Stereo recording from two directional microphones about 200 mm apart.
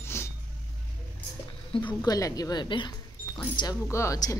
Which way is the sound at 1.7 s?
20° left (ahead or behind).